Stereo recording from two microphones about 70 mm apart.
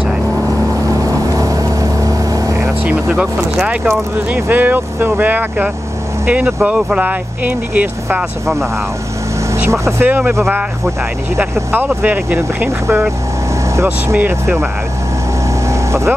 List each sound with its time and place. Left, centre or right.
0.8 s boat: right
2.8 s speech: right
9.7 s speech: right
10.0 s speech: right
12.0 s speech: right
12.6 s speech: right
13.8 s speech: right
15.7 s vehicle: right